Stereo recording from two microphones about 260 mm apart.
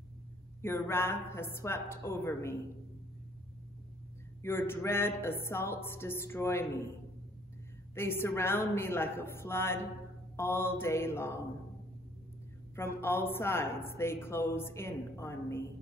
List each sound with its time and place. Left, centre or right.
0.6 s speech: centre
4.4 s speech: centre
7.9 s speech: centre
12.7 s speech: centre